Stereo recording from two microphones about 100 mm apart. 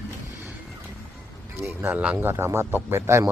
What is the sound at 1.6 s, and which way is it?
Speech, 25° right (ahead or behind).